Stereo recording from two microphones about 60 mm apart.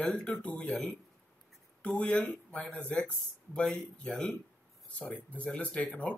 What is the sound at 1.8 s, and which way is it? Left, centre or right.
Speech, centre.